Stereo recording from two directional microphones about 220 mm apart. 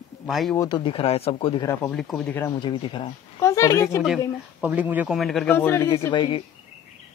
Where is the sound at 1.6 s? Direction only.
5° left (ahead or behind).